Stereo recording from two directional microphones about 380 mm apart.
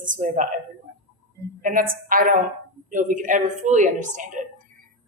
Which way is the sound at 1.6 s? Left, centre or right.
Right.